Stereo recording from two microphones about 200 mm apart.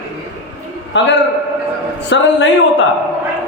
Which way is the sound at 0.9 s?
65° left (ahead or behind).